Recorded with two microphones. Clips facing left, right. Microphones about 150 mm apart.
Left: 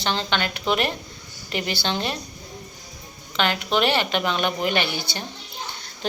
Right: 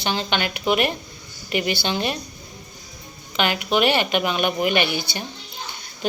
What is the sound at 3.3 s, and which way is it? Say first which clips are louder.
A woman's voice: right 1 dB; 10° right (ahead or behind).